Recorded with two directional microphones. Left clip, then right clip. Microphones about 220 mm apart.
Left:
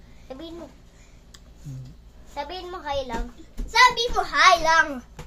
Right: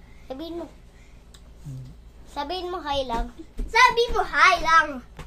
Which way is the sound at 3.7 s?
5° left (ahead or behind).